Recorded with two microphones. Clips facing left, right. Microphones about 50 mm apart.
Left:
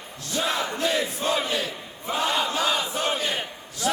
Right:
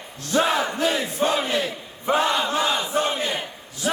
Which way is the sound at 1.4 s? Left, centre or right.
Right.